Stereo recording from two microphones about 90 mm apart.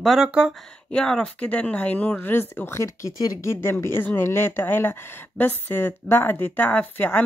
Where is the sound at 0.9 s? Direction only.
10° left (ahead or behind); by 3.1 s 30° left (ahead or behind).